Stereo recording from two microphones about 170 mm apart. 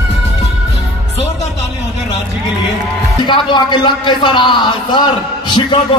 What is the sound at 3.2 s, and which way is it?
Speech, 25° left (ahead or behind).